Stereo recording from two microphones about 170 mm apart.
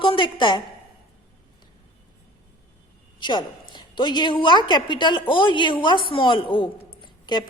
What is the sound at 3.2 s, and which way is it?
A woman's voice, 25° left (ahead or behind).